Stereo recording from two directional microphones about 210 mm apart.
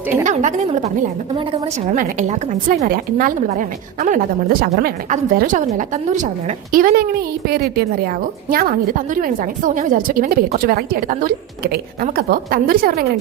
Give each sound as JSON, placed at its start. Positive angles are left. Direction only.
{"t": 0.1, "sound": "a woman's voice", "side_deg": -35}
{"t": 1.9, "sound": "a woman's voice", "side_deg": -35}